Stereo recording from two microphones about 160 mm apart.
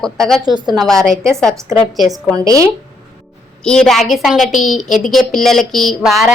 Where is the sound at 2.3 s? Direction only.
20° right (ahead or behind).